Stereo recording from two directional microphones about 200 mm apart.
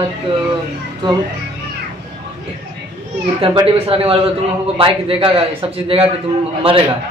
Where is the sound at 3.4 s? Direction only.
25° right (ahead or behind).